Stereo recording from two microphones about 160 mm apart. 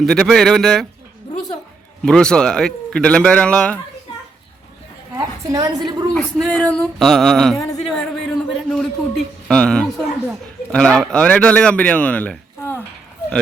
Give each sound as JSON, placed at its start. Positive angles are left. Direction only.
{"t": 0.0, "sound": "speech", "side_deg": 5}
{"t": 2.0, "sound": "speech", "side_deg": 5}
{"t": 5.1, "sound": "a woman's voice", "side_deg": -20}
{"t": 6.1, "sound": "speech", "side_deg": 5}